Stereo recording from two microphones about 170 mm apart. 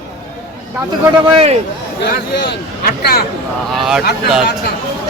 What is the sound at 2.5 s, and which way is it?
Speech, 70° left (ahead or behind).